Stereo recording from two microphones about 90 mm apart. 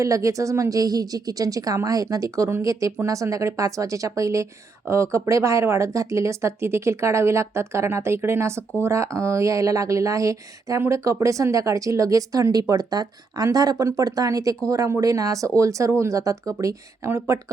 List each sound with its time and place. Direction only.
0.0 s speech: 35° right (ahead or behind)